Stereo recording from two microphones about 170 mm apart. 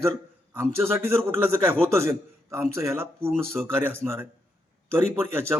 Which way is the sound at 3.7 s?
15° right (ahead or behind).